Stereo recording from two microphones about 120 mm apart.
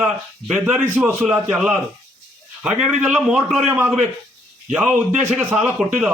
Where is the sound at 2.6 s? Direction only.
10° right (ahead or behind).